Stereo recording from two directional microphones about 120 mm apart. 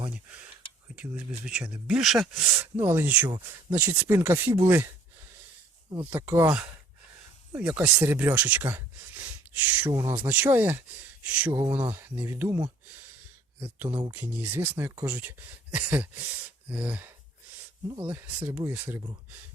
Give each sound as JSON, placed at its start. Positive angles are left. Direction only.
{"t": 0.1, "sound": "speech", "side_deg": -10}
{"t": 2.7, "sound": "speech", "side_deg": -15}
{"t": 6.1, "sound": "speech", "side_deg": -20}
{"t": 7.5, "sound": "speech", "side_deg": -10}
{"t": 9.9, "sound": "speech", "side_deg": -25}
{"t": 10.2, "sound": "speech", "side_deg": -15}
{"t": 13.7, "sound": "speech", "side_deg": -15}
{"t": 18.1, "sound": "speech", "side_deg": -15}